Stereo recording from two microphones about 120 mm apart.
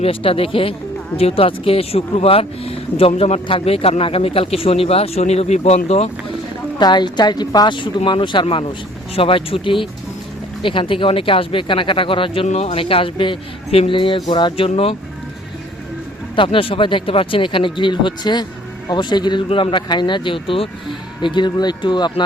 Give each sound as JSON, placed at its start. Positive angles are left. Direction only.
{"t": 0.0, "sound": "speech", "side_deg": 50}
{"t": 3.4, "sound": "speech", "side_deg": 50}
{"t": 6.7, "sound": "speech", "side_deg": 40}
{"t": 10.6, "sound": "speech", "side_deg": 45}
{"t": 12.5, "sound": "speech", "side_deg": 75}
{"t": 12.7, "sound": "speech", "side_deg": 50}
{"t": 16.3, "sound": "speech", "side_deg": 45}